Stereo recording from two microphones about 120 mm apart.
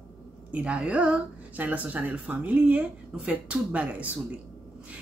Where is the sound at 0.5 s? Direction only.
10° right (ahead or behind).